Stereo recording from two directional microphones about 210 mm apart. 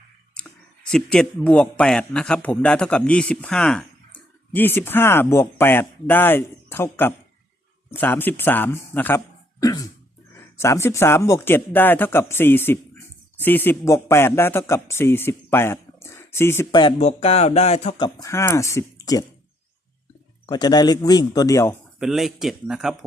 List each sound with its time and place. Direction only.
0.3 s speech: 5° left (ahead or behind)
16.8 s speech: 30° left (ahead or behind)
18.2 s speech: 15° left (ahead or behind)
20.5 s speech: 20° left (ahead or behind)
21.9 s a man's voice: centre (ahead or behind)